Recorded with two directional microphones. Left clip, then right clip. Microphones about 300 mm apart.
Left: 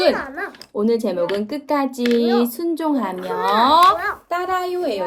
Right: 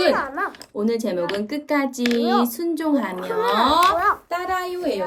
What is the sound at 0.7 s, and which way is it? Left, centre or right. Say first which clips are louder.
Speech: left 6 dB; centre.